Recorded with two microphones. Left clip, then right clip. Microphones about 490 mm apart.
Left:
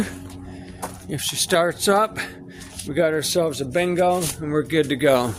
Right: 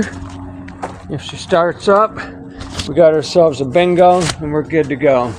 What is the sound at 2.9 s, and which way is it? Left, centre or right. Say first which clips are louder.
Speech: right 10 dB; left.